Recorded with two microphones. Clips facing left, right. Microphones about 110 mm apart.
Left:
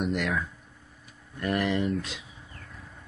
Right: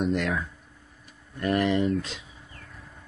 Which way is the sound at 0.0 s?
Centre (ahead or behind).